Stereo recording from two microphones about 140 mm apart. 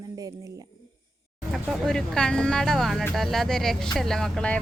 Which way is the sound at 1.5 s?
Centre (ahead or behind).